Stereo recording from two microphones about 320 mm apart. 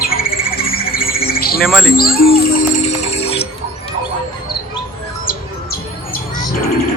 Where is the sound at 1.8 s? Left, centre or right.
Left.